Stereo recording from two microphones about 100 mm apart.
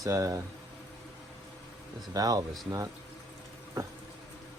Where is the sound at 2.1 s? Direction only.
35° right (ahead or behind).